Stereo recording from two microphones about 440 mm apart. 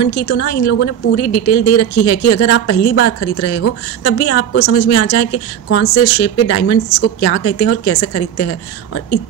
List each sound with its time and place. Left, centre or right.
0.0 s a woman's voice: left